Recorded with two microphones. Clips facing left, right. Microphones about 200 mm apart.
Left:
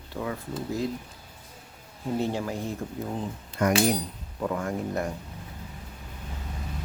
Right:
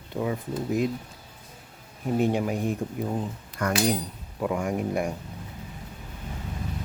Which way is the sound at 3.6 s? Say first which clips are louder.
Left 3 dB; 20° left (ahead or behind).